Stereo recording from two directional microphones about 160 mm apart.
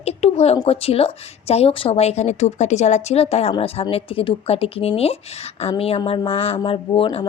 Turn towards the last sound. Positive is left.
turn(degrees=30)  # may be behind; listen again after turning